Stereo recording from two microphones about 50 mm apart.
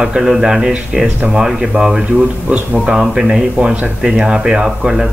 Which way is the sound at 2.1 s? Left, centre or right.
Right.